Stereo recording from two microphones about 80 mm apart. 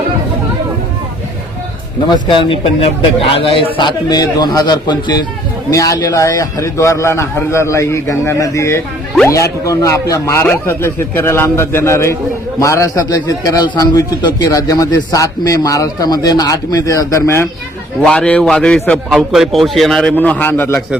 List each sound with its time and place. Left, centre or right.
2.0 s speech: left
3.8 s a man's voice: left
5.7 s a man's voice: left
10.4 s a man's voice: left
16.0 s a man's voice: left
18.0 s a man's voice: centre
19.1 s a man's voice: centre
20.1 s a man's voice: centre